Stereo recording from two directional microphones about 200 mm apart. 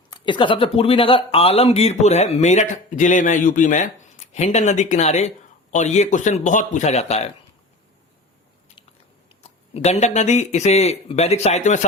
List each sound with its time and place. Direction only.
0.1 s speech: 25° left (ahead or behind)
9.4 s speech: 35° left (ahead or behind)